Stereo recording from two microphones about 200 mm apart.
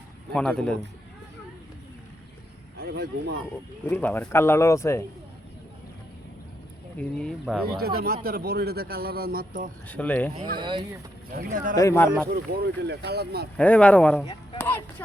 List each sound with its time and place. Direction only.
0.3 s speech: 5° left (ahead or behind)
2.8 s speech: 55° right (ahead or behind)
3.8 s a man's voice: 10° left (ahead or behind)
7.0 s speech: 5° left (ahead or behind)
7.8 s a man's voice: 50° right (ahead or behind)
9.9 s a man's voice: 5° left (ahead or behind)
10.3 s speech: 25° right (ahead or behind)
11.3 s a man's voice: 45° right (ahead or behind)
11.7 s a man's voice: 15° left (ahead or behind)
12.3 s a man's voice: 55° right (ahead or behind)
13.6 s speech: 5° left (ahead or behind)